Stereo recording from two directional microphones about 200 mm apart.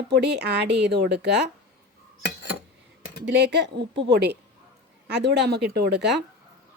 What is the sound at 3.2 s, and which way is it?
A woman's voice, 60° right (ahead or behind).